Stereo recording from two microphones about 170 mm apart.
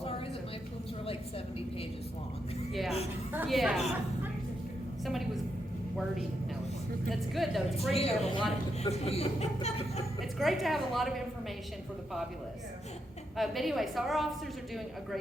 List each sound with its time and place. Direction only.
3.3 s a woman's voice: 5° right (ahead or behind)
7.1 s a woman's voice: centre (ahead or behind)
7.9 s a woman's voice: 35° left (ahead or behind)
10.3 s a woman's voice: centre (ahead or behind)
13.3 s a woman's voice: centre (ahead or behind)